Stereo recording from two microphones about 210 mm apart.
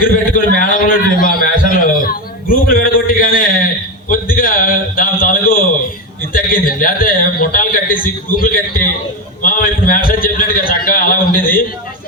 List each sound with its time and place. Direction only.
0.0 s a man's voice: 40° left (ahead or behind)
0.6 s a sound: 40° left (ahead or behind)
6.3 s a man's voice: 40° left (ahead or behind)